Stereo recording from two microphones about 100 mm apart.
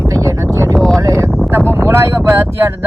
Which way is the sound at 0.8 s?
Centre (ahead or behind).